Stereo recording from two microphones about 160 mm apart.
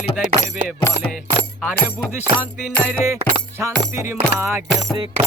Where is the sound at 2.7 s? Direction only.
10° left (ahead or behind).